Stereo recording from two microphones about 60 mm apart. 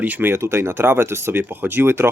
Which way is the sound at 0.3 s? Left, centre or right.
Right.